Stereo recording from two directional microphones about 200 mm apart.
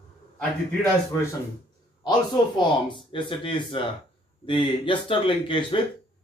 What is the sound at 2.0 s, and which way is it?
A man's voice, 20° left (ahead or behind).